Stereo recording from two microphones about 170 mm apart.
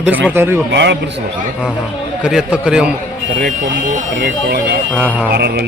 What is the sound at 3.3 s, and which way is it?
Speech, 50° right (ahead or behind).